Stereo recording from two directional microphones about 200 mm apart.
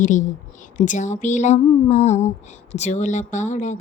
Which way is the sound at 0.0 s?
40° left (ahead or behind).